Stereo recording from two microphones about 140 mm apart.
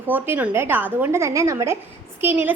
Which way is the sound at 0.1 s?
15° right (ahead or behind).